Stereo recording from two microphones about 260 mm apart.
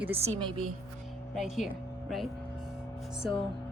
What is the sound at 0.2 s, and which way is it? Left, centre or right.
Speech, right.